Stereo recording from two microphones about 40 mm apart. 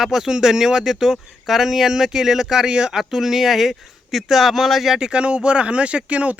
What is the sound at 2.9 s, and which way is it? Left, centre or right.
Speech, centre.